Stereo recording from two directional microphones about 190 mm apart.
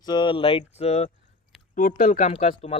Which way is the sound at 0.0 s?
25° left (ahead or behind).